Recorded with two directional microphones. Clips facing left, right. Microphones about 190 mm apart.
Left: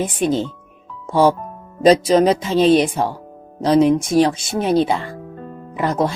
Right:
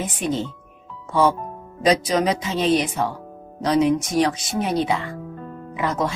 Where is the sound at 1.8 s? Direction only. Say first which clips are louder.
Left 7 dB; 30° left (ahead or behind).